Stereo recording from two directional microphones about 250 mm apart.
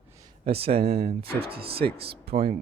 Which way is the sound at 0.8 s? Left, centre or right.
Right.